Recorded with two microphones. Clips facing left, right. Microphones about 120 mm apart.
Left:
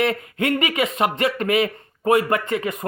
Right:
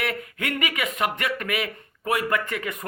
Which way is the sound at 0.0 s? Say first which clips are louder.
Left 7 dB; 25° left (ahead or behind).